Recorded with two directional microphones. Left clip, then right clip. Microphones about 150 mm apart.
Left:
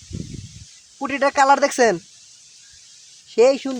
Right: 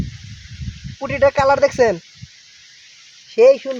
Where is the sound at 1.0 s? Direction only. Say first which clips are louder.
Right 2 dB; 25° left (ahead or behind).